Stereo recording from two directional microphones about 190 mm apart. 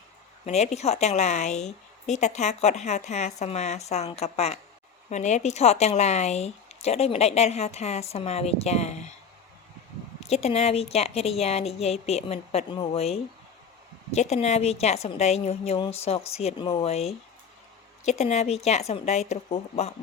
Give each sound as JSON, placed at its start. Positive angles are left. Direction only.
{"t": 0.4, "sound": "a woman's voice", "side_deg": 35}
{"t": 10.2, "sound": "a woman's voice", "side_deg": 35}